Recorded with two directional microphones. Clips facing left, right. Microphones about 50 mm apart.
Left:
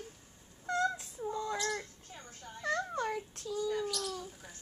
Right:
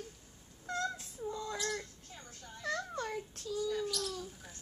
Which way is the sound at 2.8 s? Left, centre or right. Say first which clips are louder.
Left 4 dB; left.